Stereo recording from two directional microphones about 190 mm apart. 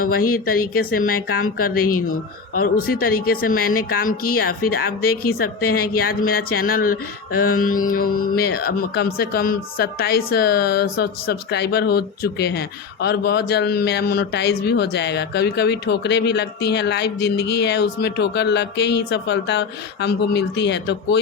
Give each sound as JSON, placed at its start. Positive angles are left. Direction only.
{"t": 0.0, "sound": "speech", "side_deg": 50}